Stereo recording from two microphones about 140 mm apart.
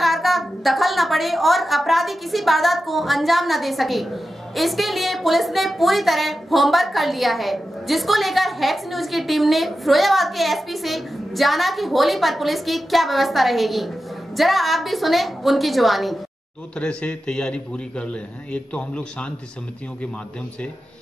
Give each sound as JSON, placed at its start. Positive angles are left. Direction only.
{"t": 0.0, "sound": "a woman's voice", "side_deg": 0}